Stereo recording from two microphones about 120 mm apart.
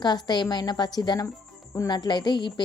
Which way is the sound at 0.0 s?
35° left (ahead or behind).